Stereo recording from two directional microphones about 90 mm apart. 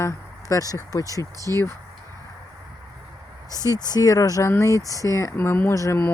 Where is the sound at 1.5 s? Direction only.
30° left (ahead or behind).